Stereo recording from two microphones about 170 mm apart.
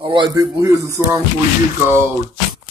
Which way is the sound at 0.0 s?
25° right (ahead or behind).